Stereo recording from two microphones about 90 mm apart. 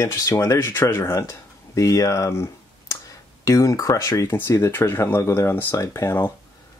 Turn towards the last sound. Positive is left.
turn(degrees=25)  # may be behind; listen again after turning